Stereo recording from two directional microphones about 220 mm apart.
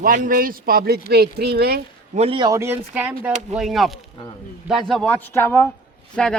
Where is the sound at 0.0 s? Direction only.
40° right (ahead or behind).